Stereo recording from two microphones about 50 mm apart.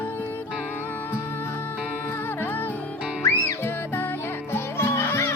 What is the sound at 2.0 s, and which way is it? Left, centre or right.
Music, left.